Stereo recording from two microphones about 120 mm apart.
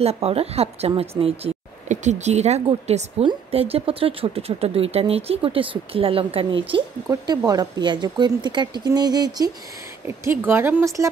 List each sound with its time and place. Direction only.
0.0 s speech: 55° right (ahead or behind)
1.4 s speech: 75° right (ahead or behind)
3.5 s speech: 55° right (ahead or behind)
7.1 s speech: 35° right (ahead or behind)
10.0 s a woman's voice: 20° right (ahead or behind)